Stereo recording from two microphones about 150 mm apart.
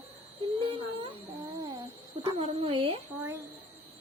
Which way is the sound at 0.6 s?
40° right (ahead or behind).